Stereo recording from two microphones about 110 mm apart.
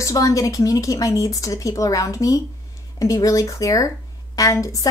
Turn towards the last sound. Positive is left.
turn(degrees=30)  # may be behind; listen again after turning